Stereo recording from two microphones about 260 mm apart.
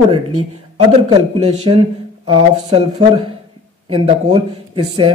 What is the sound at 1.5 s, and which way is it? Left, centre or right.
Speech, right.